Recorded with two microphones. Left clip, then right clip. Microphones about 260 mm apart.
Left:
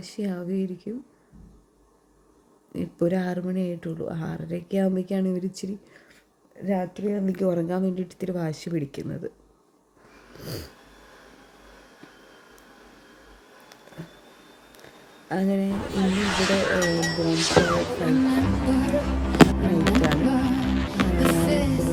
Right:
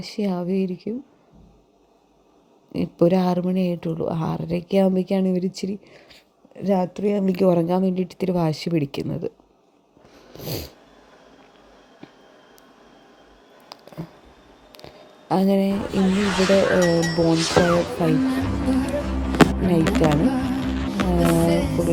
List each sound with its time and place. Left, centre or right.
0.2 s speech: centre
2.7 s speech: centre
6.6 s a woman's voice: right
10.3 s speech: centre
15.3 s speech: centre
15.7 s speech: centre
19.8 s music: centre